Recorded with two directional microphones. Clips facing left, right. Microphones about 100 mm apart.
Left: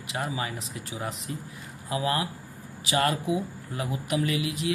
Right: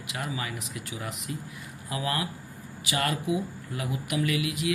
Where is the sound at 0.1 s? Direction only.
30° left (ahead or behind).